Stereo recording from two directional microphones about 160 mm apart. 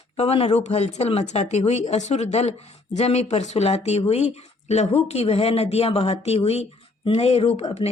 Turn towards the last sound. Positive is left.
turn(degrees=40)  # may be behind; listen again after turning